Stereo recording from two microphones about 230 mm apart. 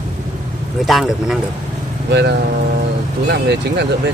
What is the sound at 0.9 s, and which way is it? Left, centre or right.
Speech, centre.